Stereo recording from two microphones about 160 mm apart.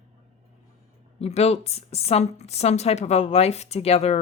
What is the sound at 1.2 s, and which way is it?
Speech, 40° left (ahead or behind).